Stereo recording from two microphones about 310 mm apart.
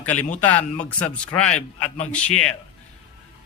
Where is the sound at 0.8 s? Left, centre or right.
Centre.